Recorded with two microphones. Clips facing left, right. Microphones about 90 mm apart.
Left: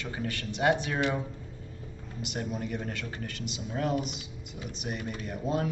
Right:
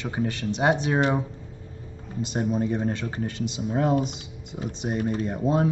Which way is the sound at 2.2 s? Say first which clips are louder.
Right 9 dB; 30° right (ahead or behind).